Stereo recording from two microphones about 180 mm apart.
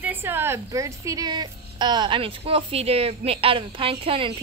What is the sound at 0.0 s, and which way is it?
A woman's voice, 10° right (ahead or behind).